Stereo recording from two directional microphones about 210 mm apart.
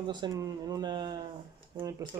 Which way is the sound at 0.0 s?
20° right (ahead or behind).